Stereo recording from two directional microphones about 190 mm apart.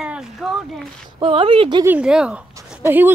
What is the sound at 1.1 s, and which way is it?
Speech, 25° right (ahead or behind).